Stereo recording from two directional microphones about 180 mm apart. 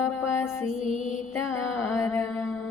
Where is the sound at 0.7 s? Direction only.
30° right (ahead or behind).